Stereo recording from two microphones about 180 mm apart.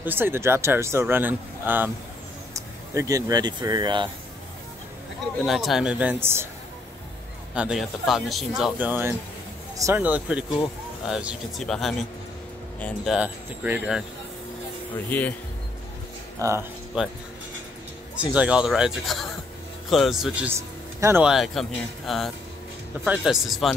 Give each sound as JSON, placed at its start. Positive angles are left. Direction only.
{"t": 0.0, "sound": "speech", "side_deg": -10}
{"t": 5.4, "sound": "speech", "side_deg": 0}
{"t": 7.5, "sound": "speech", "side_deg": -5}
{"t": 15.0, "sound": "speech", "side_deg": 10}
{"t": 16.3, "sound": "speech", "side_deg": -15}
{"t": 17.0, "sound": "speech", "side_deg": -5}
{"t": 18.2, "sound": "speech", "side_deg": -5}
{"t": 21.3, "sound": "speech", "side_deg": 0}